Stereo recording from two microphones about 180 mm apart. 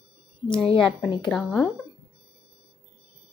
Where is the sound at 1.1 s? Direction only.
25° left (ahead or behind).